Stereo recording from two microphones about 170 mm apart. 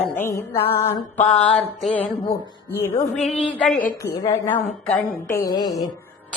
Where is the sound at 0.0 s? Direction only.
15° left (ahead or behind).